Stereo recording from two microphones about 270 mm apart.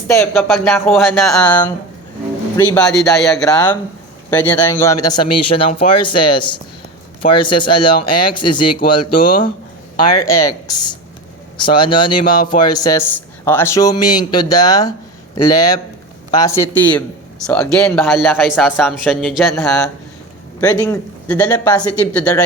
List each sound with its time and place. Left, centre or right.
0.1 s a man's voice: centre
9.0 s speech: left
10.1 s a man's voice: centre